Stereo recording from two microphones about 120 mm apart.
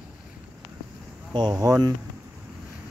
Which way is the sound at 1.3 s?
35° right (ahead or behind).